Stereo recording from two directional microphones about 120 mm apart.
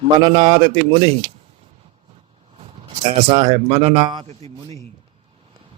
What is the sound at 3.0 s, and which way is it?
A man's voice, 45° right (ahead or behind).